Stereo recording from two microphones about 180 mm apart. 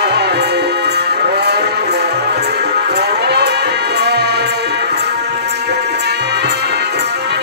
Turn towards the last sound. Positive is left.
turn(degrees=-65)  # may be behind; listen again after turning